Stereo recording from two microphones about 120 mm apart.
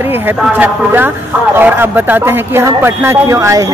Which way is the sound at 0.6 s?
15° right (ahead or behind).